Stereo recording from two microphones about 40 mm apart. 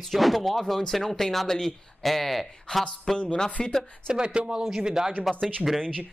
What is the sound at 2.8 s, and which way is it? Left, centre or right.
Speech, centre.